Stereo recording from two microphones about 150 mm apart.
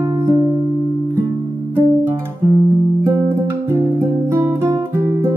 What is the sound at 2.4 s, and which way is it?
Guitar, 15° right (ahead or behind).